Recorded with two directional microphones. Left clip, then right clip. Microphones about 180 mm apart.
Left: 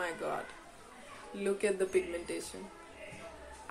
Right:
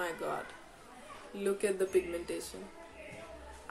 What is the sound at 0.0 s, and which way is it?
Speech, 10° right (ahead or behind).